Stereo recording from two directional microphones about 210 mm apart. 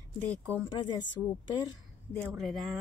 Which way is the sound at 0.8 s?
20° left (ahead or behind).